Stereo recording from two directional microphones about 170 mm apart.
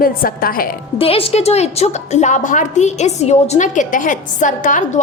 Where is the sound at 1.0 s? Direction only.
35° left (ahead or behind).